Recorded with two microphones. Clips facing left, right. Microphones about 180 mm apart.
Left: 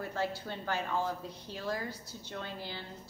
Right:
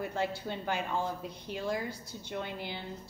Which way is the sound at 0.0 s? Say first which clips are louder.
Right 2 dB; 15° right (ahead or behind).